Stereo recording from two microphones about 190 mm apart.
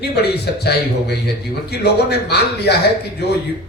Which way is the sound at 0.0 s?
60° left (ahead or behind).